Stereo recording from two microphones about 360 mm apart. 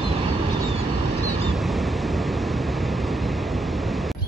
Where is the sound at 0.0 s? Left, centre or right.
Centre.